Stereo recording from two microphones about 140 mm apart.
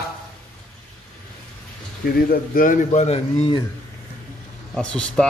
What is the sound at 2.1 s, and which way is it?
A man's voice, 90° left.